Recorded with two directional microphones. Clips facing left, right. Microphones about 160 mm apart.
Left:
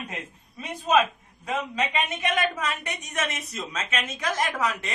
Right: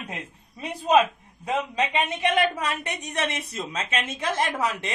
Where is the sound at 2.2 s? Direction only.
30° right (ahead or behind).